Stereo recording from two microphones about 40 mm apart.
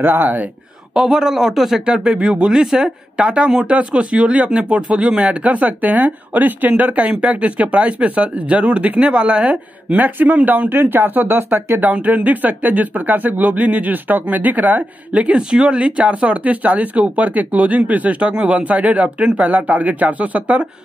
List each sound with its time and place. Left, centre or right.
0.0 s speech: right
0.9 s speech: centre
1.9 s speech: right
9.9 s speech: right
11.8 s speech: right